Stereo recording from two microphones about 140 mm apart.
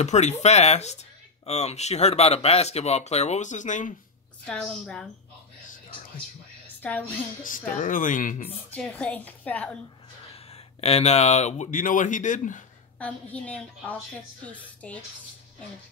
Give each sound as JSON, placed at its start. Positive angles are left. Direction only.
{"t": 0.0, "sound": "speech", "side_deg": 55}
{"t": 4.5, "sound": "a woman's voice", "side_deg": 5}
{"t": 6.8, "sound": "a woman's voice", "side_deg": 10}
{"t": 7.7, "sound": "speech", "side_deg": 70}
{"t": 8.6, "sound": "a woman's voice", "side_deg": 10}
{"t": 10.8, "sound": "speech", "side_deg": 50}
{"t": 13.0, "sound": "a woman's voice", "side_deg": 10}